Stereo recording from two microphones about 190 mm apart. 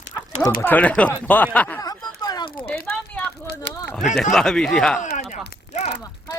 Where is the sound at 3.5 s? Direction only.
60° left (ahead or behind).